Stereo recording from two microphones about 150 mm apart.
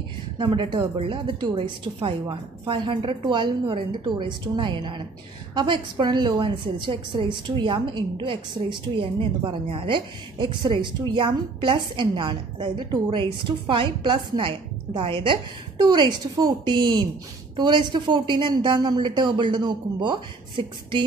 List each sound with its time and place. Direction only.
0.4 s a woman's voice: 35° right (ahead or behind)